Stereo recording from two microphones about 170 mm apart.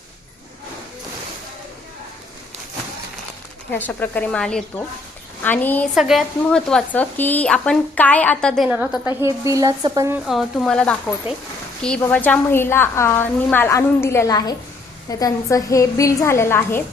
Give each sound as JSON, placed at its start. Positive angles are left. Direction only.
{"t": 3.7, "sound": "a woman's voice", "side_deg": 10}
{"t": 5.9, "sound": "speech", "side_deg": 0}
{"t": 8.7, "sound": "a woman's voice", "side_deg": -10}
{"t": 10.2, "sound": "a woman's voice", "side_deg": 0}